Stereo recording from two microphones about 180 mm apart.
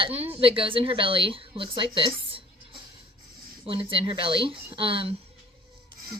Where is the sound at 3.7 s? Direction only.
30° right (ahead or behind).